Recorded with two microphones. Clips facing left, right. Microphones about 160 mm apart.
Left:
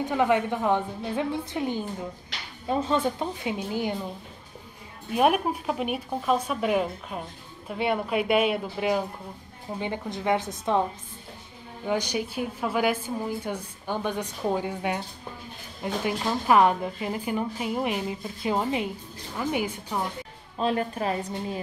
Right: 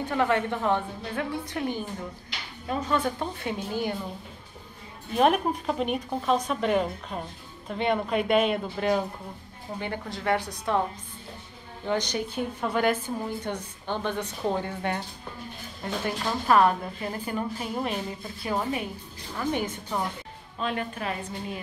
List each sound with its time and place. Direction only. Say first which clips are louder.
0.1 s a woman's voice: left 1 dB; 10° left (ahead or behind)
3.0 s speech: left 2 dB; 15° left (ahead or behind)
5.1 s a woman's voice: even; 10° left (ahead or behind)
11.8 s speech: left 1 dB; 10° left (ahead or behind)
20.5 s a woman's voice: left 4 dB; 35° left (ahead or behind)